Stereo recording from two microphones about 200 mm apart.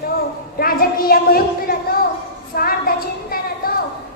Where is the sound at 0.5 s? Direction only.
50° left (ahead or behind).